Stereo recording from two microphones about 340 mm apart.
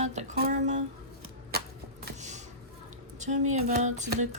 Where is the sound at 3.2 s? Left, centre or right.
Right.